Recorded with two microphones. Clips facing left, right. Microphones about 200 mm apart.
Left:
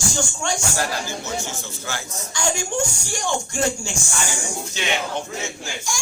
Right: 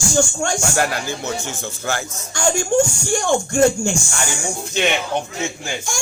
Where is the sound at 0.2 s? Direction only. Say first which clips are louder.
Right 9 dB; 55° right (ahead or behind).